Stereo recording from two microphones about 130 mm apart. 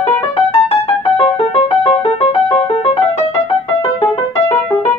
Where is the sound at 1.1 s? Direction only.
50° left (ahead or behind).